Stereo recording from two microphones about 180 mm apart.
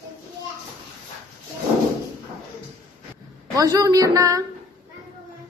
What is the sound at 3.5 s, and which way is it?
Speech, 20° right (ahead or behind).